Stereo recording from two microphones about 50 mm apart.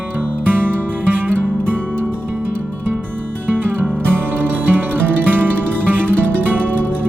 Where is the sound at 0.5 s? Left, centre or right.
Right.